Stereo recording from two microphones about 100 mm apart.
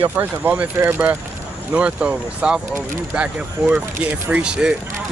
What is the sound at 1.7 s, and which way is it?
Speech, 15° right (ahead or behind).